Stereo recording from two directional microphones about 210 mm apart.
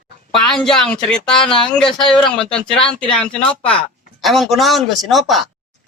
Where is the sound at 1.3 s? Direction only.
25° left (ahead or behind).